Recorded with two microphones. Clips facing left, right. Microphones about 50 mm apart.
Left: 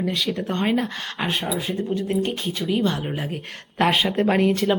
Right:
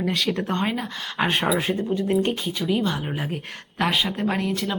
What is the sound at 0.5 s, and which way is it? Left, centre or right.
Speech, centre.